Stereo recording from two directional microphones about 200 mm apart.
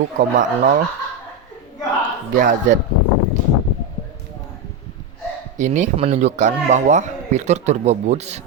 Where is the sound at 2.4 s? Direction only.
40° right (ahead or behind).